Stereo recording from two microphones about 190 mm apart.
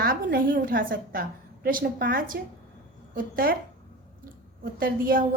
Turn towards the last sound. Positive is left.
turn(degrees=-50)  # may be behind; listen again after turning